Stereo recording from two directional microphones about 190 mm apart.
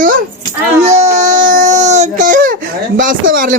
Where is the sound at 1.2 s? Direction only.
40° right (ahead or behind).